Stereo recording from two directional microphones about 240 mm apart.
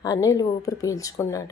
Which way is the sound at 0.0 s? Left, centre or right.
Centre.